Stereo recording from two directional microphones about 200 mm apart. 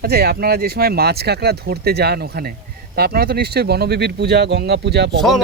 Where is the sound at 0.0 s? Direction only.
50° right (ahead or behind).